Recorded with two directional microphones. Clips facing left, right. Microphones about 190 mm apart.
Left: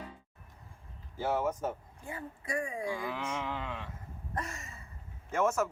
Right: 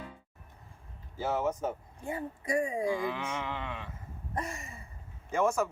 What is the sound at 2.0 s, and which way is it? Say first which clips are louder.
Speech: right 6 dB; 25° right (ahead or behind).